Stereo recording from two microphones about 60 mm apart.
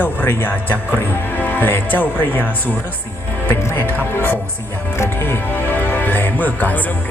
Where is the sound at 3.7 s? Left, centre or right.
Left.